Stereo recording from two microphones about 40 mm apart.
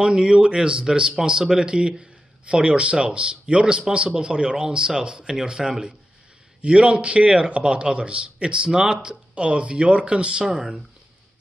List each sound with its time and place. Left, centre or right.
0.0 s a man's voice: right
9.3 s a man's voice: right
10.4 s speech: centre